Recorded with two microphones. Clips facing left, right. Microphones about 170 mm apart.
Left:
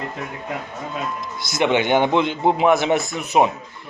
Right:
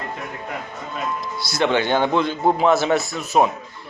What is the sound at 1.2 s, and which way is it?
A man's voice, 15° left (ahead or behind).